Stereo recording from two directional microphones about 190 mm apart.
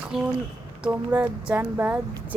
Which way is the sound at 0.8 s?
5° right (ahead or behind).